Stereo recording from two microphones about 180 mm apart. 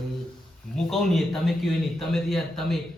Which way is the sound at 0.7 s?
Centre (ahead or behind).